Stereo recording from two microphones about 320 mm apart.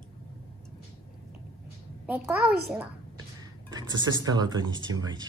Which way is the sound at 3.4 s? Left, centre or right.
Centre.